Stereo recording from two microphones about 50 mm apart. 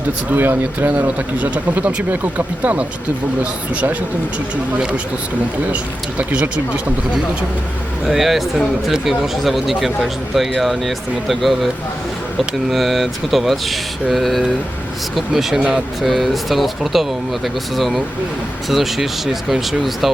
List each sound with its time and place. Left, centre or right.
0.3 s speech: right
5.7 s speech: right
8.0 s speech: centre
15.5 s speech: centre
16.0 s speech: centre